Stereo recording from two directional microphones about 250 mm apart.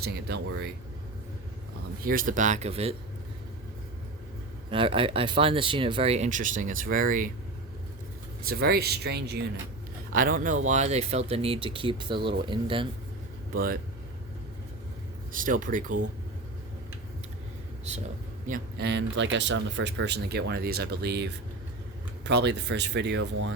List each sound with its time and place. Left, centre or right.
0.0 s speech: right
2.0 s speech: right
4.7 s speech: right
8.4 s speech: right; by 12.9 s centre
13.5 s speech: right
15.3 s speech: right
18.4 s speech: right